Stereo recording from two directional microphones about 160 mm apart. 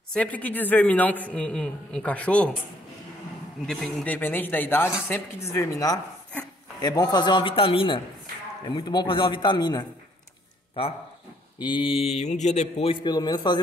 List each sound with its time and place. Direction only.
0.1 s a man's voice: 10° left (ahead or behind)
3.6 s a man's voice: 5° left (ahead or behind); by 13.6 s 25° left (ahead or behind)